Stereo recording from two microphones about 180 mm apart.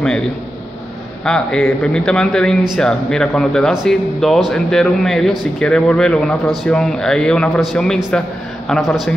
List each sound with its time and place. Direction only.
1.2 s speech: 5° left (ahead or behind)